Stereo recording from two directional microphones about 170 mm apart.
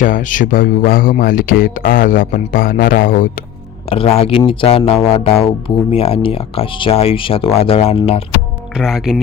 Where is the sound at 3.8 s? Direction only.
35° left (ahead or behind).